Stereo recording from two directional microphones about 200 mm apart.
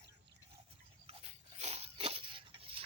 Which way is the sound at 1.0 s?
30° right (ahead or behind).